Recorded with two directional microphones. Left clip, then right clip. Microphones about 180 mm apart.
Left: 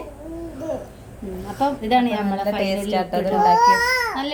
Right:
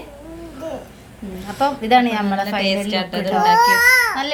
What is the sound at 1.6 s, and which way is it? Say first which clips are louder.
Speech: right 4 dB; 5° right (ahead or behind).